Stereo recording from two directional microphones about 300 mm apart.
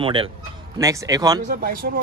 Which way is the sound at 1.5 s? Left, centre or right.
Right.